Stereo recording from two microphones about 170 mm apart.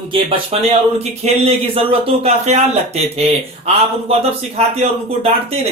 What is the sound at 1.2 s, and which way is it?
A man's voice, 40° right (ahead or behind).